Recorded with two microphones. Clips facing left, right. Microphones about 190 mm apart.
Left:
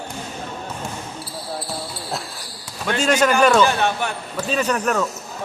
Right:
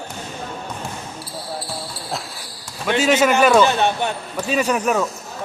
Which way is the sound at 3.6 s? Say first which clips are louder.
Right 1 dB; 20° right (ahead or behind).